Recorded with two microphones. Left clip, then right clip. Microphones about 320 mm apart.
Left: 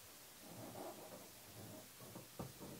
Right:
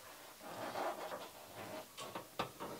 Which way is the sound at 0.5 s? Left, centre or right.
Centre.